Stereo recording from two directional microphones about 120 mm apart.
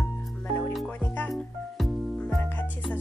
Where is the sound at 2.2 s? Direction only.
15° left (ahead or behind).